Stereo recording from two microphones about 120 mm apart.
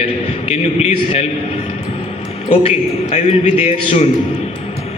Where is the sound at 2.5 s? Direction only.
65° left (ahead or behind).